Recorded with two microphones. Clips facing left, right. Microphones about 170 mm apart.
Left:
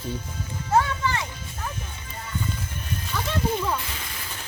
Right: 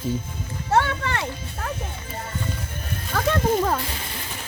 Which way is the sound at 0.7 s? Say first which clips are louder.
Even; 70° right (ahead or behind).